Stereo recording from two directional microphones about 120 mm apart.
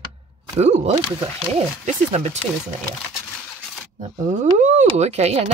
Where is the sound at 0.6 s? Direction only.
65° right (ahead or behind).